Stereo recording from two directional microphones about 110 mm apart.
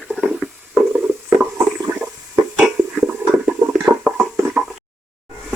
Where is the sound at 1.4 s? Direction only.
15° right (ahead or behind).